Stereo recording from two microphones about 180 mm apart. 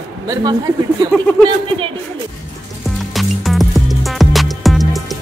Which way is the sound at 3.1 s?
Centre (ahead or behind).